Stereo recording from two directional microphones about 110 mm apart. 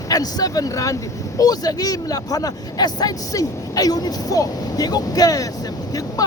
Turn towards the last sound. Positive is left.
turn(degrees=35)  # may be behind; listen again after turning